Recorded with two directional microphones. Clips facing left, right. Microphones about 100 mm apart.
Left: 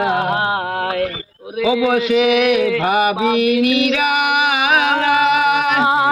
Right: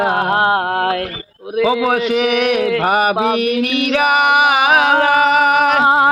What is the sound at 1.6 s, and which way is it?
Female singing, 40° right (ahead or behind).